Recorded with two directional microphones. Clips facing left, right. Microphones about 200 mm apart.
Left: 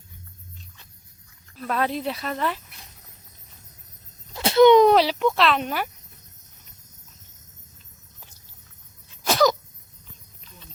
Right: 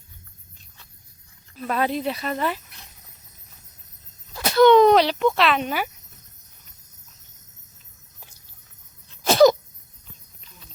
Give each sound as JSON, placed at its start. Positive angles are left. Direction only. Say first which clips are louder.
{"t": 1.5, "sound": "speech", "louder": "right 2 dB", "side_deg": -5}
{"t": 4.4, "sound": "a sound", "louder": "even", "side_deg": 25}
{"t": 9.2, "sound": "sneeze", "louder": "right 6 dB", "side_deg": -25}